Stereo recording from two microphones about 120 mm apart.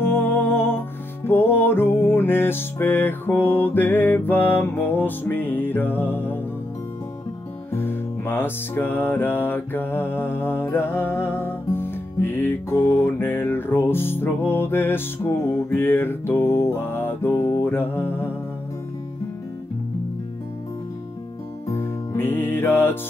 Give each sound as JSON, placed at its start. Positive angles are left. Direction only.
{"t": 0.1, "sound": "humming", "side_deg": 15}
{"t": 1.2, "sound": "music", "side_deg": 20}
{"t": 7.7, "sound": "music", "side_deg": 20}
{"t": 21.6, "sound": "music", "side_deg": 20}